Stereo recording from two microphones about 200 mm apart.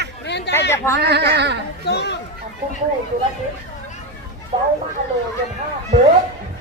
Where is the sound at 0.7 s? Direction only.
15° left (ahead or behind).